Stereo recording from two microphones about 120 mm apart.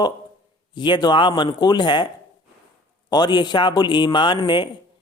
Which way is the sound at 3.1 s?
35° left (ahead or behind).